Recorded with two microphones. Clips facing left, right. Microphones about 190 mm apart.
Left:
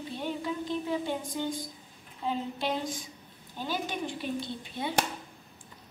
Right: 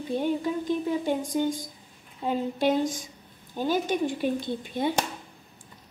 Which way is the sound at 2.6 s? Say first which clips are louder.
Right 8 dB; 45° right (ahead or behind).